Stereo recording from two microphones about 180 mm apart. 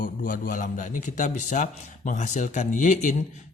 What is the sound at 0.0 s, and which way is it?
A man's voice, 50° left (ahead or behind).